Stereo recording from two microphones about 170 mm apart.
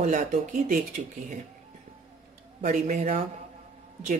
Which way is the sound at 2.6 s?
45° right (ahead or behind).